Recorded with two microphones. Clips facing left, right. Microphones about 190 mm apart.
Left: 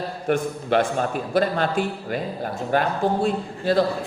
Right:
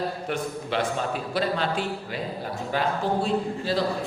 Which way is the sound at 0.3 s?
50° left (ahead or behind).